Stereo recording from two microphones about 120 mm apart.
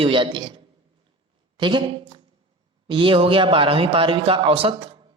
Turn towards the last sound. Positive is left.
turn(degrees=-50)  # may be behind; listen again after turning